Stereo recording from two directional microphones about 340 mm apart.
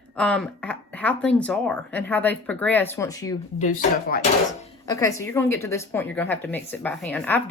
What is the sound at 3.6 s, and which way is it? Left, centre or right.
Speech, left.